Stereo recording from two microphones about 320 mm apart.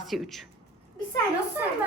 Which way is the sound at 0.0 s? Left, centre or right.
Centre.